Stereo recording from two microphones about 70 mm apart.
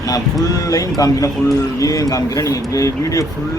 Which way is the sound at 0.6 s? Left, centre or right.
Left.